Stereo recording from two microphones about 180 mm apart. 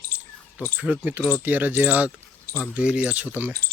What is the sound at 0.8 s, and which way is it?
Speech, 10° right (ahead or behind).